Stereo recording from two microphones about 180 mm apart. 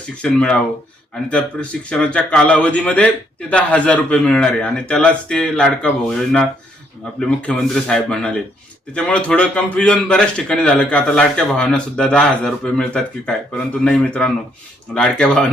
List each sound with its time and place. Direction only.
0.2 s a man's voice: 5° left (ahead or behind)